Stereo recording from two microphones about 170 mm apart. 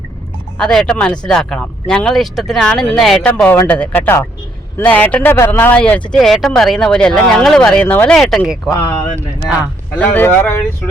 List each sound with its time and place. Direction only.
0.6 s speech: 5° left (ahead or behind)
10.0 s speech: 10° left (ahead or behind)